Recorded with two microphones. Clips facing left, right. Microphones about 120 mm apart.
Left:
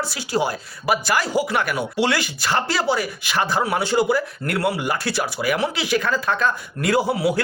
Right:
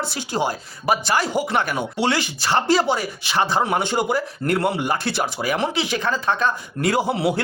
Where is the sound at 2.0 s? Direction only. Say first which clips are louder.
Right 1 dB; 20° right (ahead or behind).